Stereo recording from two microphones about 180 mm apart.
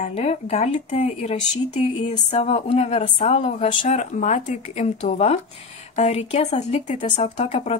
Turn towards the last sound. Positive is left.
turn(degrees=40)  # may be behind; listen again after turning